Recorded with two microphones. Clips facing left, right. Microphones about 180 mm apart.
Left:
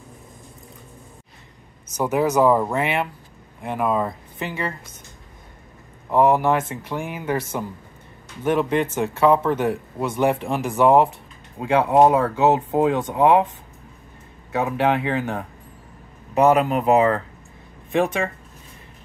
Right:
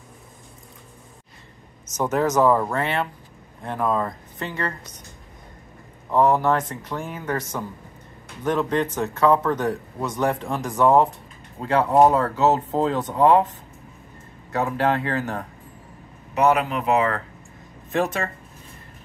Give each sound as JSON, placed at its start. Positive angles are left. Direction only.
{"t": 2.0, "sound": "speech", "side_deg": 10}
{"t": 6.0, "sound": "speech", "side_deg": 10}
{"t": 14.5, "sound": "speech", "side_deg": 15}
{"t": 16.5, "sound": "speech", "side_deg": 40}
{"t": 17.9, "sound": "speech", "side_deg": 15}